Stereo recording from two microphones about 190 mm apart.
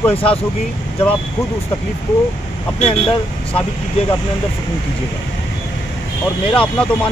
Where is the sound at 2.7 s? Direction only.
30° left (ahead or behind).